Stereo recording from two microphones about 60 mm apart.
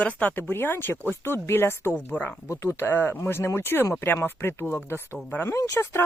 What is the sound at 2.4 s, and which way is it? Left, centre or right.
Speech, left.